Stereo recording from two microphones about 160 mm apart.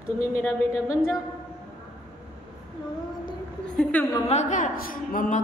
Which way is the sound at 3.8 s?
10° left (ahead or behind).